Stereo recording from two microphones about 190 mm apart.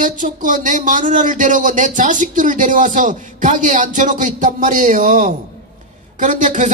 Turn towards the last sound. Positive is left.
turn(degrees=-40)  # may be behind; listen again after turning